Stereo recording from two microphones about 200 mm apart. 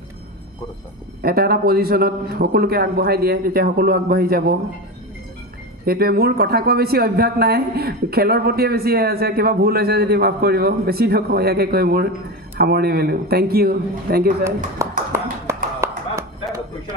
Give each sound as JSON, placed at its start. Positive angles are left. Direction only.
{"t": 1.2, "sound": "speech", "side_deg": -50}
{"t": 5.9, "sound": "speech", "side_deg": -50}
{"t": 14.8, "sound": "clapping", "side_deg": -15}